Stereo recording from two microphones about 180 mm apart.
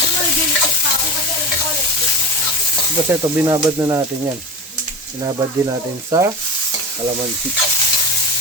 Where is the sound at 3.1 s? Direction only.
15° right (ahead or behind).